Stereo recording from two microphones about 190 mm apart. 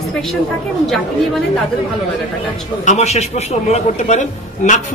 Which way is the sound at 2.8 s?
35° left (ahead or behind).